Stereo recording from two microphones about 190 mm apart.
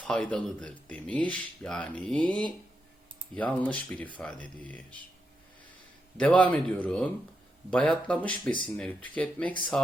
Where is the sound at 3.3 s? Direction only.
5° left (ahead or behind).